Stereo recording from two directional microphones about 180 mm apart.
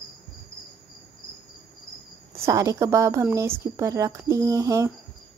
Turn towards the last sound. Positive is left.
turn(degrees=-20)  # may be behind; listen again after turning